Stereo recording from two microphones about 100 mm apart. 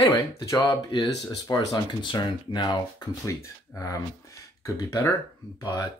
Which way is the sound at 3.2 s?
30° left (ahead or behind).